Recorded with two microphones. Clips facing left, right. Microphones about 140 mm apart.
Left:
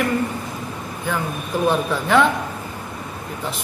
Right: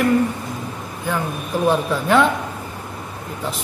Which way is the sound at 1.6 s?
5° right (ahead or behind).